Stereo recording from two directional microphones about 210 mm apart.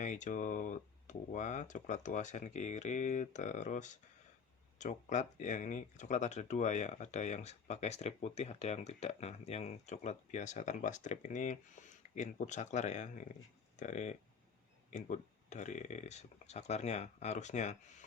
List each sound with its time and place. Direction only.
0.0 s speech: 35° left (ahead or behind)